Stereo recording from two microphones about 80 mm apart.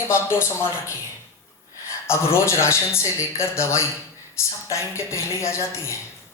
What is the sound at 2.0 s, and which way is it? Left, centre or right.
Speech, left.